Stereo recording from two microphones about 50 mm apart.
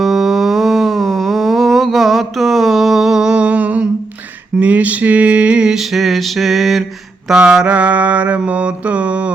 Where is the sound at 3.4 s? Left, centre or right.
Right.